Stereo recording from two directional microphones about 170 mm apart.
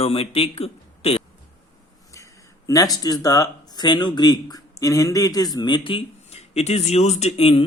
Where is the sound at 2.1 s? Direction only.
20° left (ahead or behind).